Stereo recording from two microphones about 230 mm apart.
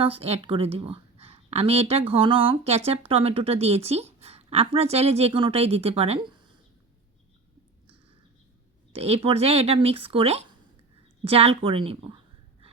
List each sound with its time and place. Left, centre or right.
0.0 s speech: right
8.9 s speech: right